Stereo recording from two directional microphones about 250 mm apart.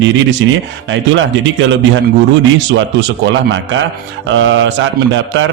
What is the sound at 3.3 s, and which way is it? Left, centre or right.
A man's voice, right.